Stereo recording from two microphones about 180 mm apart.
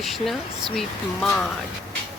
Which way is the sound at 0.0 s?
Centre (ahead or behind).